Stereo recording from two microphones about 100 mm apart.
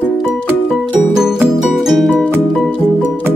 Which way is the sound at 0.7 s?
Centre (ahead or behind).